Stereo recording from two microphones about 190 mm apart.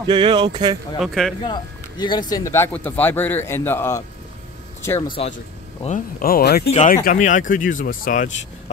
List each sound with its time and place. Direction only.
0.0 s speech: 25° right (ahead or behind)
0.9 s speech: centre (ahead or behind)
1.4 s speech: 25° left (ahead or behind)
5.9 s speech: 45° left (ahead or behind)
6.7 s speech: 40° left (ahead or behind)